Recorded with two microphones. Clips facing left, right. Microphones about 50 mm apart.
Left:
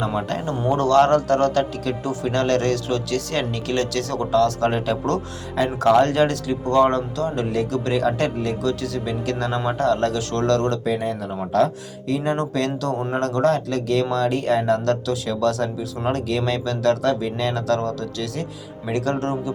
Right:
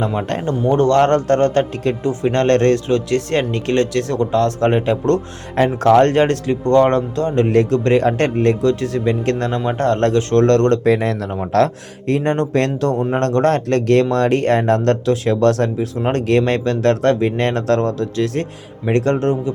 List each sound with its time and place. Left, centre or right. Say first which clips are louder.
0.3 s speech: right 5 dB; right
10.9 s speech: right 5 dB; right
11.5 s speech: right 4 dB; right